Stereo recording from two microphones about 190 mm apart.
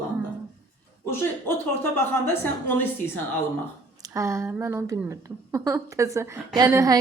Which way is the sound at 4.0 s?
15° right (ahead or behind).